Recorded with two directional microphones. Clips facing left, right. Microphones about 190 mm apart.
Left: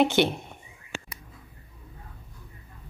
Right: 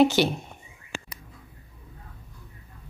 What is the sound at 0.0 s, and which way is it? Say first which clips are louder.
Speech: right 2 dB; 20° left (ahead or behind).